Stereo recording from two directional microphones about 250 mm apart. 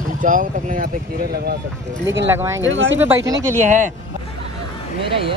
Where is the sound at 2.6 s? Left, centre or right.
Right.